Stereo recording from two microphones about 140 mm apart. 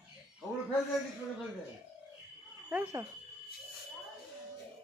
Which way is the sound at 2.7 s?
15° right (ahead or behind).